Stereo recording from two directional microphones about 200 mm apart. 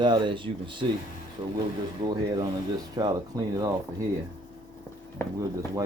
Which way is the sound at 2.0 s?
20° right (ahead or behind).